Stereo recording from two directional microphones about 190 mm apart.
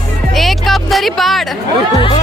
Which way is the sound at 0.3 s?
Centre (ahead or behind).